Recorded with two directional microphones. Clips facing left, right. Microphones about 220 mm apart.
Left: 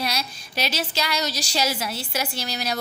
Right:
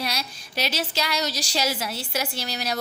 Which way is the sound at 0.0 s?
40° right (ahead or behind).